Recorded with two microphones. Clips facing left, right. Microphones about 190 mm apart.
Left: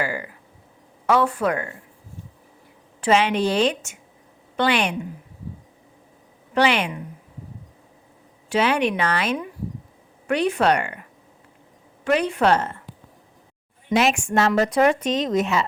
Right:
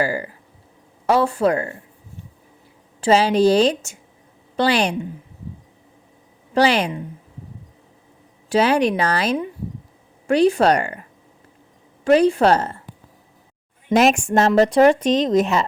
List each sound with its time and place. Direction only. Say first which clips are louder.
0.0 s speech: right 5 dB; 35° right (ahead or behind)
3.0 s speech: right 4 dB; 35° right (ahead or behind)
6.5 s speech: right 3 dB; 35° right (ahead or behind)
8.4 s speech: right 4 dB; 35° right (ahead or behind)
12.0 s speech: right 5 dB; 35° right (ahead or behind)
13.9 s speech: right 4 dB; 40° right (ahead or behind)